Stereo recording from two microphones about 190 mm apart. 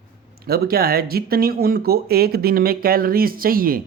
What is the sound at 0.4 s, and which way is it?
A man's voice, 55° right (ahead or behind).